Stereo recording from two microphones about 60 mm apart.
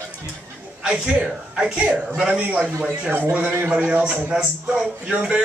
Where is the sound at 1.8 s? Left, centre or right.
Right.